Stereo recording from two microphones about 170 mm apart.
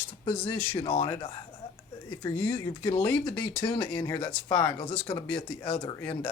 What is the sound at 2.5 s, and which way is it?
Speech, 30° left (ahead or behind).